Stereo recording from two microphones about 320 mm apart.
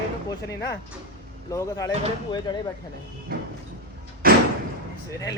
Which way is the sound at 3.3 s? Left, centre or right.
Right.